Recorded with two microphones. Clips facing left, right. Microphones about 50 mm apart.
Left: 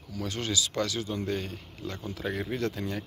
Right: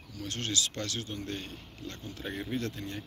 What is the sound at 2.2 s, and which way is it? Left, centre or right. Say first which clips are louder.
Speech: left 6 dB; left.